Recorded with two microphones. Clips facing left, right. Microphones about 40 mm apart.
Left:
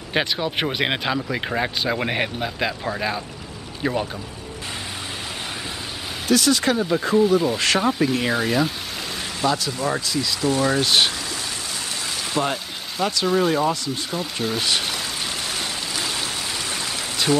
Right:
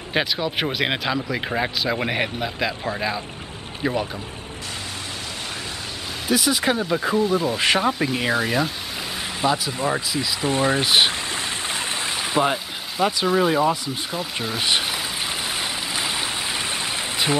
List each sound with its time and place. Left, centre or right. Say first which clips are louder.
0.1 s speech: even; centre
6.2 s speech: left 2 dB; centre
9.4 s speech: even; centre
10.8 s speech: right 1 dB; centre
15.5 s a sound: right 1 dB; centre